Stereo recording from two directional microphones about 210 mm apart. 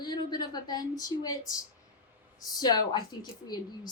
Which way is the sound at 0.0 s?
20° left (ahead or behind).